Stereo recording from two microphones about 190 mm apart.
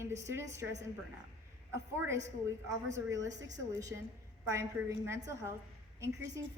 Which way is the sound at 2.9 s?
15° right (ahead or behind).